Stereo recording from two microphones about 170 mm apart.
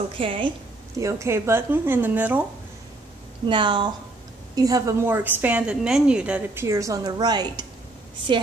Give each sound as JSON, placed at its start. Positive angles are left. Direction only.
{"t": 0.2, "sound": "a woman's voice", "side_deg": -30}
{"t": 0.9, "sound": "a woman's voice", "side_deg": -20}
{"t": 3.4, "sound": "a woman's voice", "side_deg": -30}